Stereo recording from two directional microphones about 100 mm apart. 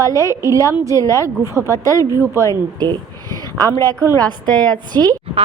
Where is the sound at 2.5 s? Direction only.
40° right (ahead or behind).